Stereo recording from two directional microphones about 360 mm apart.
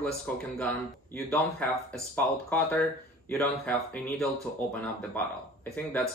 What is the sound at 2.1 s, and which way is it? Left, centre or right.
Speech, centre.